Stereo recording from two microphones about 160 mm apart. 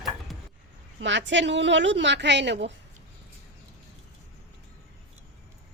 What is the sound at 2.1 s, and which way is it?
Speech, 90° right.